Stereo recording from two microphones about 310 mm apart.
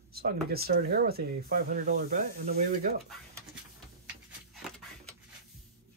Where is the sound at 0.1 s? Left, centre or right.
Right.